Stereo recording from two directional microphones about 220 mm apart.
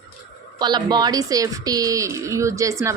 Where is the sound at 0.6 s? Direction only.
20° right (ahead or behind).